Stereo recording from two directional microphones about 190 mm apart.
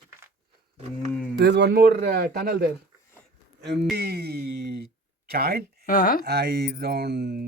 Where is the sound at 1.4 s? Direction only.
60° right (ahead or behind).